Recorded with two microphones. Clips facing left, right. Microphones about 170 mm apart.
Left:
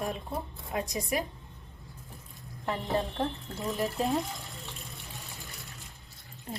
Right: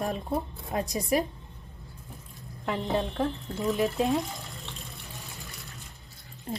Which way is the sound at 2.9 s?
Centre (ahead or behind).